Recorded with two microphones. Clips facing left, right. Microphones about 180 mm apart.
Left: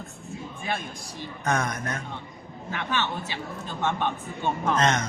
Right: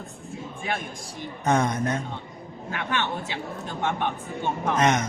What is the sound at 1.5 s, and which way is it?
Speech, 25° right (ahead or behind).